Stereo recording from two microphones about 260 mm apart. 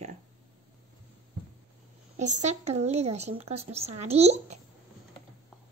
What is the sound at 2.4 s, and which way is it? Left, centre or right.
Speech, right.